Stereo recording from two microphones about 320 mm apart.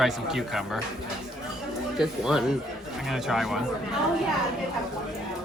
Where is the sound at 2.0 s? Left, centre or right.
Centre.